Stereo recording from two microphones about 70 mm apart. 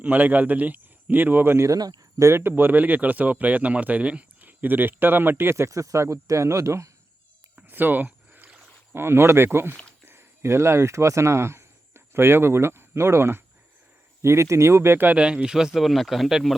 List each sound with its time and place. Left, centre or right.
0.0 s speech: right
1.6 s speech: right
2.1 s speech: right
7.5 s a sound: right
8.9 s speech: right
15.1 s speech: centre